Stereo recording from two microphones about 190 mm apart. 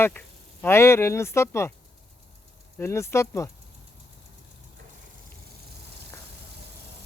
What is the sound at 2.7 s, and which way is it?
Speech, 15° left (ahead or behind).